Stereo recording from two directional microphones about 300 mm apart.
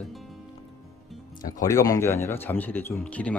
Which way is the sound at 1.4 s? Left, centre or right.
Centre.